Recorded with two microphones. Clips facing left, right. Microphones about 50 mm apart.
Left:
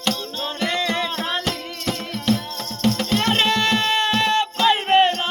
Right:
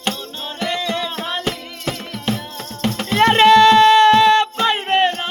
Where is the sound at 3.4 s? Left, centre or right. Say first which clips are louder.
Right 11 dB; right.